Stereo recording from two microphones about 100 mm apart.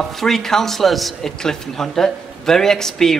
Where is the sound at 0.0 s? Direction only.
5° left (ahead or behind).